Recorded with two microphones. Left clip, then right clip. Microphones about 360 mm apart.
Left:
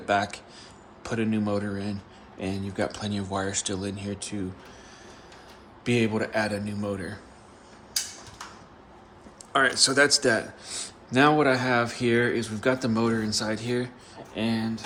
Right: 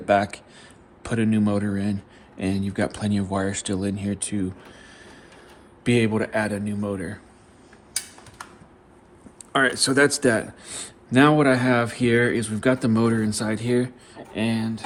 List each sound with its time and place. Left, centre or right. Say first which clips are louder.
0.0 s a man's voice: right 5 dB; right
5.8 s a man's voice: right 4 dB; right
9.5 s a man's voice: right 1 dB; right